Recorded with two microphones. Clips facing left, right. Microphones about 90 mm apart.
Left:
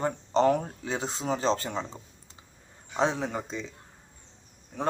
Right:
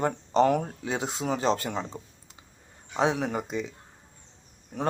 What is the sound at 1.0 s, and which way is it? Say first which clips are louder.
Speech: left 1 dB; 25° left (ahead or behind).